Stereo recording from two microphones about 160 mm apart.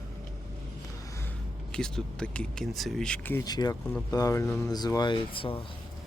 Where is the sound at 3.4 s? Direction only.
25° left (ahead or behind).